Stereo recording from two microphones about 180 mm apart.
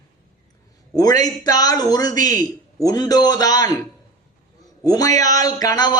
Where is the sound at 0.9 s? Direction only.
20° left (ahead or behind).